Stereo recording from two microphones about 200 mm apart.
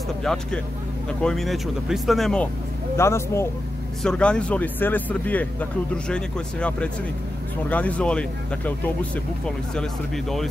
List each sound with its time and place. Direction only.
0.2 s speech: centre (ahead or behind)
3.0 s speech: 15° left (ahead or behind)